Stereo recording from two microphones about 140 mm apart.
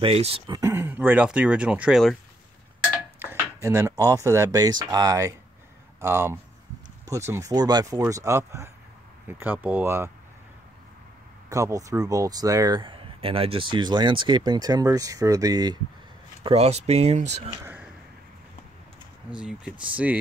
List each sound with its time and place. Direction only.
0.0 s speech: 45° right (ahead or behind)
0.5 s speech: 20° right (ahead or behind); by 2.1 s centre (ahead or behind)
3.2 s speech: 20° right (ahead or behind)
11.4 s speech: 25° right (ahead or behind)
16.4 s speech: 45° right (ahead or behind)
19.3 s speech: 5° right (ahead or behind)